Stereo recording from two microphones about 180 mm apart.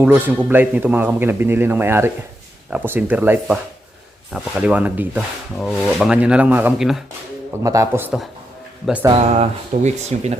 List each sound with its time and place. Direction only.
0.0 s a man's voice: 10° right (ahead or behind)
7.6 s a man's voice: 20° right (ahead or behind)
9.0 s speech: 35° right (ahead or behind)